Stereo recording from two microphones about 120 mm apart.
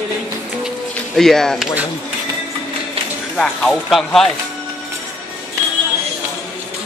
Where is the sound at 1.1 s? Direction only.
5° left (ahead or behind).